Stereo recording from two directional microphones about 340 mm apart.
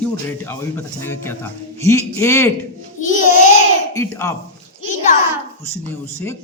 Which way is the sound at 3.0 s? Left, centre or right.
Left.